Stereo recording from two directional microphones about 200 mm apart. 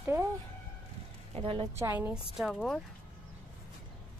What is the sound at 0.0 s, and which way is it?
Chicken, 10° right (ahead or behind).